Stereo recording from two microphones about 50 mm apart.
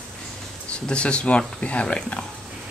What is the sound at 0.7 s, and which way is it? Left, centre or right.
Speech, centre.